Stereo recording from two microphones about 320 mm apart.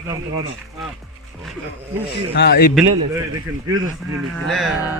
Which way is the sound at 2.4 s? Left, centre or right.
Left.